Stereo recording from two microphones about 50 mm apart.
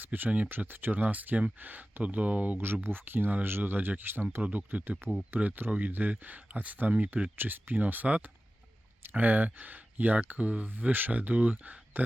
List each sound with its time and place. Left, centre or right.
0.0 s speech: right
2.8 s speech: right
4.4 s speech: right
8.0 s speech: right